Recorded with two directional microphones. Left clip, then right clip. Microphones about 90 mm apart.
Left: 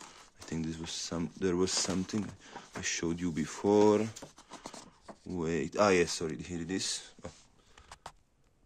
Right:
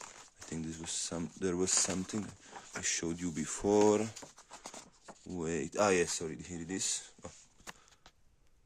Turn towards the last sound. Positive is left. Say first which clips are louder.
# left 2 dB
turn(degrees=-40)  # may be behind; listen again after turning